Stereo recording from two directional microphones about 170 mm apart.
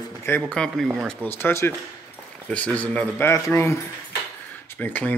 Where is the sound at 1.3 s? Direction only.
15° left (ahead or behind).